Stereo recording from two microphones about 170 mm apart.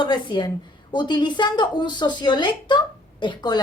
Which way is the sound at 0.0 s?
25° left (ahead or behind).